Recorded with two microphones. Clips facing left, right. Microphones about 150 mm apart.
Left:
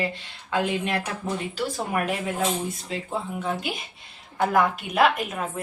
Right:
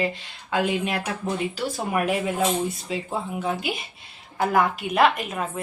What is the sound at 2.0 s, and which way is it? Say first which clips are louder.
A woman's voice: right 4 dB; 5° right (ahead or behind).